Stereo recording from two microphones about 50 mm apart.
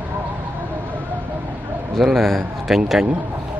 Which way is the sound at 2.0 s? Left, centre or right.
Centre.